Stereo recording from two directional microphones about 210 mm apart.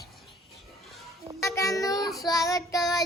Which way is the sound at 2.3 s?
15° left (ahead or behind).